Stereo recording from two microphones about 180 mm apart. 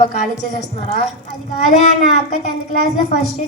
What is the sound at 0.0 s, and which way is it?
Speech, 50° left (ahead or behind).